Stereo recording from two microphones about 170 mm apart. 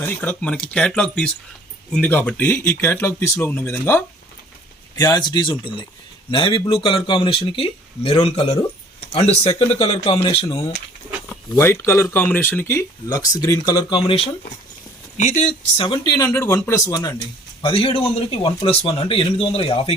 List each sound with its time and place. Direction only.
0.0 s speech: 10° left (ahead or behind)
4.9 s speech: 25° left (ahead or behind)
11.3 s speech: 15° left (ahead or behind); by 14.3 s 30° left (ahead or behind)
15.2 s speech: 45° left (ahead or behind)
15.8 s speech: 25° left (ahead or behind)
17.6 s speech: 30° left (ahead or behind)